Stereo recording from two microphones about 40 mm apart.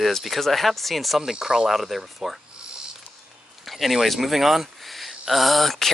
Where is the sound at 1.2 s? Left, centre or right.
Centre.